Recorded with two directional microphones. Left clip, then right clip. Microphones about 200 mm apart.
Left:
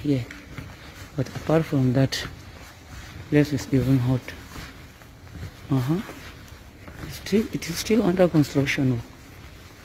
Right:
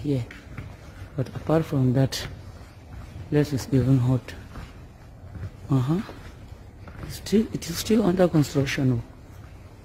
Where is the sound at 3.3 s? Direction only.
10° right (ahead or behind).